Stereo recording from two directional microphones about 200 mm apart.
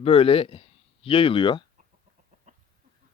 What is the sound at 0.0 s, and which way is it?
Speech, 30° left (ahead or behind).